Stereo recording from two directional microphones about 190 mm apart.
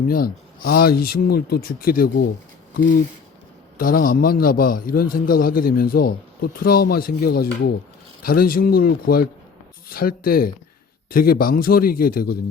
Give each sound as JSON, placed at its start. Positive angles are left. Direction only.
{"t": 0.1, "sound": "a man's voice", "side_deg": 50}
{"t": 3.8, "sound": "a man's voice", "side_deg": 45}